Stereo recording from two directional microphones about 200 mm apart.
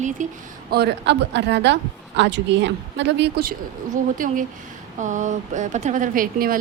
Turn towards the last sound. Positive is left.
turn(degrees=-45)  # may be behind; listen again after turning